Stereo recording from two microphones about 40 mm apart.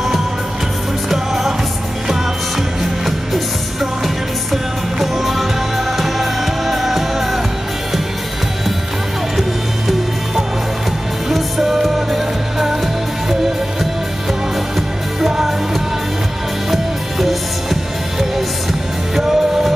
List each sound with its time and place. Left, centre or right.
1.1 s music: centre
2.8 s music: centre
4.5 s music: centre
9.4 s music: centre
15.1 s music: centre
19.1 s music: centre